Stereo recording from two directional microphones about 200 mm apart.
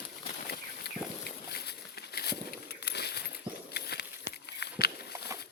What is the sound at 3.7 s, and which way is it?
Walk, 55° left (ahead or behind).